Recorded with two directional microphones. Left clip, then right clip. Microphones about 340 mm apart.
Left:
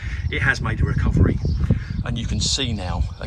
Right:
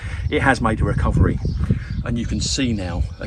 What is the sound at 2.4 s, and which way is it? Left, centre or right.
Speech, left.